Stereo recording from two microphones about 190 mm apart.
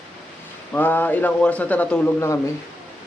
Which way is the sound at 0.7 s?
10° left (ahead or behind).